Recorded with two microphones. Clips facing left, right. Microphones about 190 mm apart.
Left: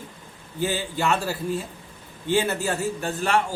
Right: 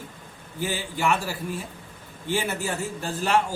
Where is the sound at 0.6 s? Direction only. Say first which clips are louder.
Left 2 dB; 15° right (ahead or behind).